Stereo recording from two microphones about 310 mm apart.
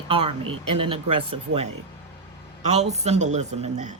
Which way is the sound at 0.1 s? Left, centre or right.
Centre.